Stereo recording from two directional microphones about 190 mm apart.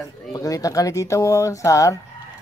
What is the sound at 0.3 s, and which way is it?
Speech, 15° left (ahead or behind).